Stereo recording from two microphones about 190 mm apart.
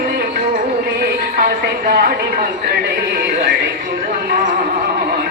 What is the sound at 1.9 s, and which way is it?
Speech, 55° right (ahead or behind).